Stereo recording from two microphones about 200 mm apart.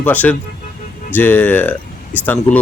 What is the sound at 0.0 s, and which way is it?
Speech, 10° left (ahead or behind).